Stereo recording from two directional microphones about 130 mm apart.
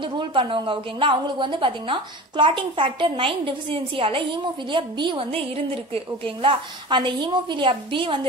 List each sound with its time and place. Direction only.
0.0 s a woman's voice: 40° right (ahead or behind)